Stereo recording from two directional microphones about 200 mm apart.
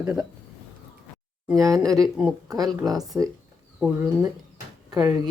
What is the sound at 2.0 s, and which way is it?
Speech, 5° right (ahead or behind).